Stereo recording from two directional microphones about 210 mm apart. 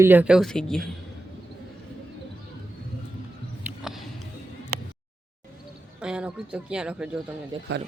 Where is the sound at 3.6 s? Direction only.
5° right (ahead or behind).